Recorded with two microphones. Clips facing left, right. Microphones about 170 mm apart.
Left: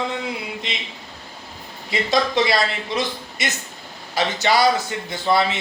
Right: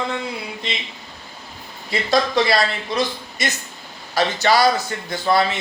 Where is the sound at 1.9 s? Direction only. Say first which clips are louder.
Right 1 dB; 20° left (ahead or behind).